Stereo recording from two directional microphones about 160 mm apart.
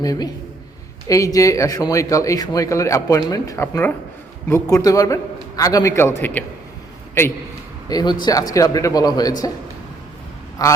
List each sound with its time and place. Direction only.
0.0 s speech: 25° left (ahead or behind)
7.9 s speech: 25° left (ahead or behind)
10.6 s speech: 25° left (ahead or behind)